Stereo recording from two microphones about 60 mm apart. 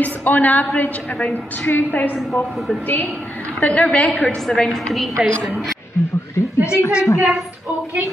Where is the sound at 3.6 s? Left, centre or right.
Left.